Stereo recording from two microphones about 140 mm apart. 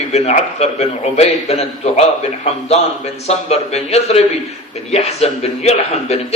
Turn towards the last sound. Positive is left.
turn(degrees=50)  # may be behind; listen again after turning